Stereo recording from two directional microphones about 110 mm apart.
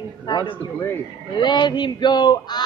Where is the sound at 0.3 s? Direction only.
40° left (ahead or behind).